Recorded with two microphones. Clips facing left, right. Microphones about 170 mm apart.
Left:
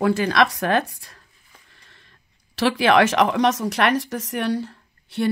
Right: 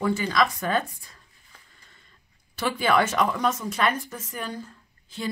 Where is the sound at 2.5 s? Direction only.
85° left.